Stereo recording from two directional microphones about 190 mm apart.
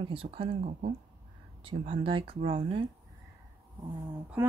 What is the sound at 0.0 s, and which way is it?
Speech, 30° right (ahead or behind).